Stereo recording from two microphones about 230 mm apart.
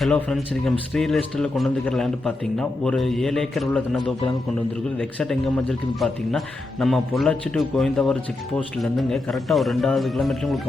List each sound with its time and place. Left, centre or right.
0.0 s a man's voice: centre